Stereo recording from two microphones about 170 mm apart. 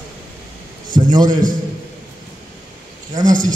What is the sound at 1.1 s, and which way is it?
Speech, 25° right (ahead or behind).